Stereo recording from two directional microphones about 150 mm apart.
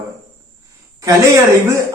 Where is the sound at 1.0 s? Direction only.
20° right (ahead or behind).